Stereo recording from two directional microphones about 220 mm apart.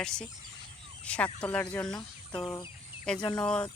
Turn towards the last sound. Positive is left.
turn(degrees=5)  # may be behind; listen again after turning